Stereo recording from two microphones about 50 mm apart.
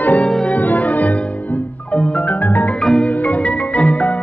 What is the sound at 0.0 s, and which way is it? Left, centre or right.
Music, left.